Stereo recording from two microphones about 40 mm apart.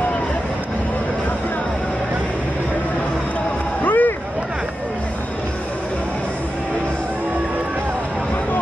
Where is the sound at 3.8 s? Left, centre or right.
Left.